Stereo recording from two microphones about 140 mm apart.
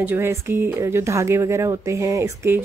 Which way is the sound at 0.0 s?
15° right (ahead or behind).